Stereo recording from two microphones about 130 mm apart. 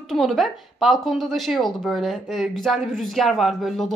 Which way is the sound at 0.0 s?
Centre (ahead or behind).